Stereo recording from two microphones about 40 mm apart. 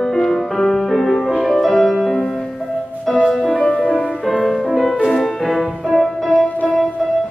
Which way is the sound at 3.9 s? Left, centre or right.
Centre.